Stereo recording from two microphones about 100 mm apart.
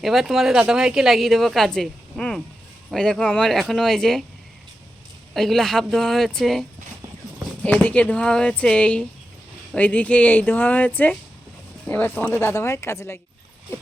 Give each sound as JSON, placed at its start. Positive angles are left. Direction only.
{"t": 0.0, "sound": "a woman's voice", "side_deg": 0}
{"t": 5.3, "sound": "a woman's voice", "side_deg": 5}
{"t": 7.6, "sound": "speech", "side_deg": 15}